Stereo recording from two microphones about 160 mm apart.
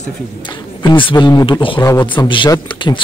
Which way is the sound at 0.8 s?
30° left (ahead or behind).